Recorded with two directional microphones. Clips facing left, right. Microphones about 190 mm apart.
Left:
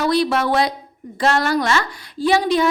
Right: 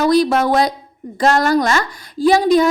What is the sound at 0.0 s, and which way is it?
A woman's voice, 45° right (ahead or behind).